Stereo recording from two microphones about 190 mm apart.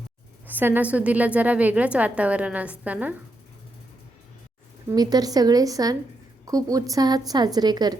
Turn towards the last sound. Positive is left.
turn(degrees=-20)  # may be behind; listen again after turning